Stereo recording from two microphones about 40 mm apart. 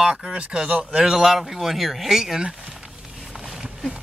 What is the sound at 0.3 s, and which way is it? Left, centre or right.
Speech, right.